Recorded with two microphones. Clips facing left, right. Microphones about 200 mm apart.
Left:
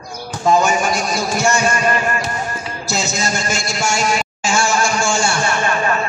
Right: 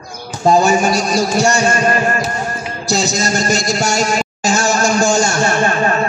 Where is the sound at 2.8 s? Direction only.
35° right (ahead or behind).